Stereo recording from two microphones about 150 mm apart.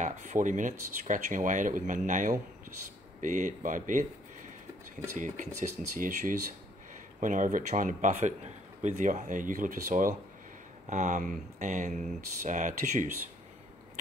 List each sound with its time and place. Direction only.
0.0 s a man's voice: 55° right (ahead or behind)
5.1 s a man's voice: 55° right (ahead or behind)